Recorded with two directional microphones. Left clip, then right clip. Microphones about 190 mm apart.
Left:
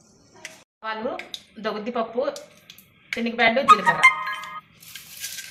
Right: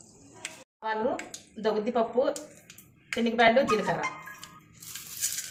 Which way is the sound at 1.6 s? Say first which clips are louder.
Even; 5° right (ahead or behind).